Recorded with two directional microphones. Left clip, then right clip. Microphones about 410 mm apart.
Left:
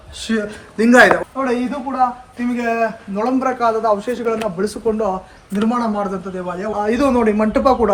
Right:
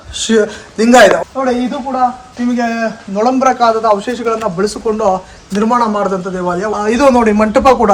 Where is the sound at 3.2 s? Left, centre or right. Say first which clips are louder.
Right 7 dB; centre.